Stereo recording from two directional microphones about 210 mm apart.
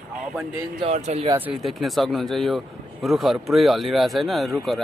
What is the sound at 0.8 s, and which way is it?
Speech, 30° right (ahead or behind).